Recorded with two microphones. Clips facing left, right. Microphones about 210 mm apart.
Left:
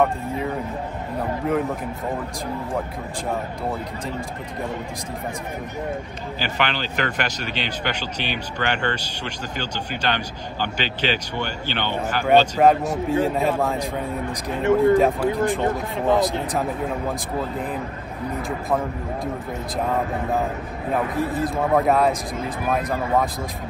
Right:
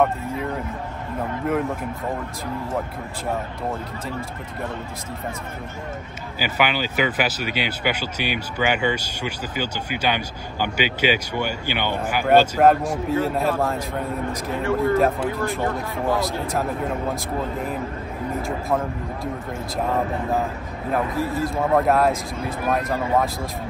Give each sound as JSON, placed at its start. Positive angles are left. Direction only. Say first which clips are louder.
{"t": 6.4, "sound": "speech", "louder": "right 3 dB", "side_deg": -10}
{"t": 12.9, "sound": "speech", "louder": "left 1 dB", "side_deg": 15}
{"t": 14.3, "sound": "speech", "louder": "left 6 dB", "side_deg": 15}
{"t": 15.0, "sound": "speech", "louder": "left 1 dB", "side_deg": 0}
{"t": 15.3, "sound": "speech", "louder": "left 3 dB", "side_deg": 15}
{"t": 17.1, "sound": "speech", "louder": "even", "side_deg": 0}
{"t": 21.3, "sound": "speech", "louder": "right 1 dB", "side_deg": 0}